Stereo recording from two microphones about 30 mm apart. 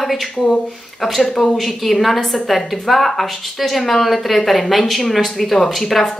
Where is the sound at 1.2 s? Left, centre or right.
Centre.